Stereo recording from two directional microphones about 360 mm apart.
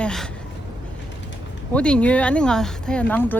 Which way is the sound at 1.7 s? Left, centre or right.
Centre.